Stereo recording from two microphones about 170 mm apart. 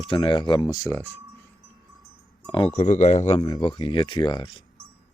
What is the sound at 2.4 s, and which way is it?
Speech, 30° left (ahead or behind).